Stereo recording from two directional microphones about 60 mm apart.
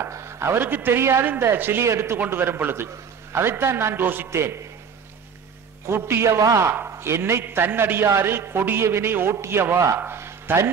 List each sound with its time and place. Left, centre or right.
0.1 s a man's voice: right
4.3 s a man's voice: right
5.9 s a man's voice: right
6.2 s a man's voice: right
7.0 s a man's voice: right